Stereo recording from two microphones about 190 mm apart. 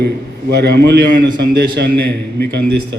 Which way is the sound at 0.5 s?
60° right (ahead or behind).